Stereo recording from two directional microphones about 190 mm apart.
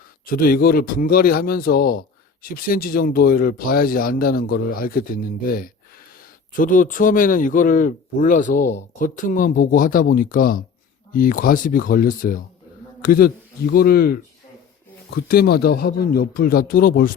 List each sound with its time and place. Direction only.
0.3 s a man's voice: 50° left (ahead or behind)